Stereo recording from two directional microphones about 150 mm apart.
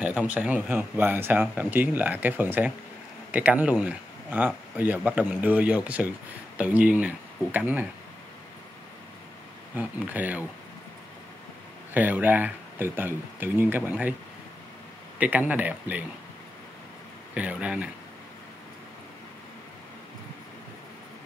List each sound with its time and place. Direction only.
0.3 s speech: 10° right (ahead or behind)
9.8 s speech: 10° right (ahead or behind)
11.9 s speech: 10° right (ahead or behind)
15.1 s speech: 10° right (ahead or behind)
17.3 s speech: 10° right (ahead or behind)